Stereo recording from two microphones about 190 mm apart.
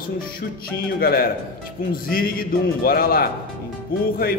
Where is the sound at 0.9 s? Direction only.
50° left (ahead or behind).